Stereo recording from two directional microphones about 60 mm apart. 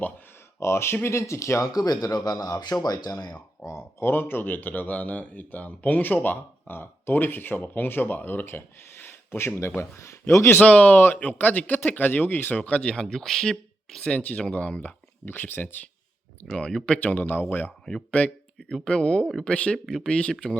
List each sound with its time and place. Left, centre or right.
0.6 s speech: left
3.6 s speech: left
10.6 s speech: left
15.2 s speech: left
16.6 s speech: centre
17.0 s speech: left